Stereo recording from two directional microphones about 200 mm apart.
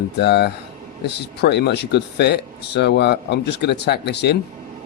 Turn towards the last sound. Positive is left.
turn(degrees=55)  # may be behind; listen again after turning